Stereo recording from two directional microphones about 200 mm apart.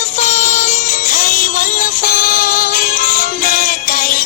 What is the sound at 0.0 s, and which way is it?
Music, 35° left (ahead or behind).